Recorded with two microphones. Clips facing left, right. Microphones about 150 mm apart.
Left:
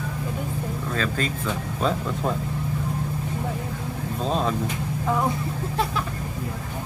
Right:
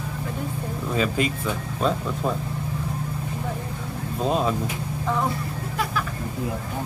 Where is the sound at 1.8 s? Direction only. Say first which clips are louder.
Right 1 dB; centre (ahead or behind).